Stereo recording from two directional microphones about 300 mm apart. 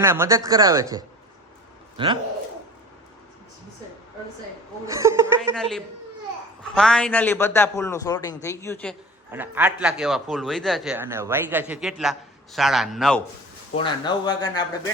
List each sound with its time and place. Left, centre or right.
0.0 s speech: centre
4.9 s a woman's voice: centre
9.3 s a man's voice: centre
13.7 s a man's voice: centre